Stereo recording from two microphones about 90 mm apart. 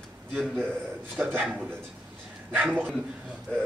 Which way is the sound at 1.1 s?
15° right (ahead or behind).